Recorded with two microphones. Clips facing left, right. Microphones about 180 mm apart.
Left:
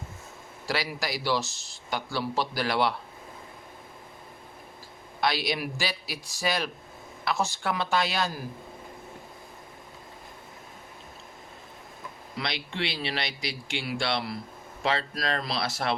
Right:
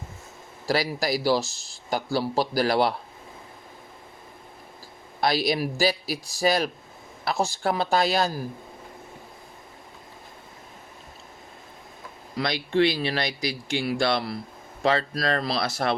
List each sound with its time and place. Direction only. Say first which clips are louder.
0.7 s speech: right 6 dB; 40° right (ahead or behind)
5.2 s speech: right 4 dB; 40° right (ahead or behind)
12.4 s speech: right 10 dB; 45° right (ahead or behind)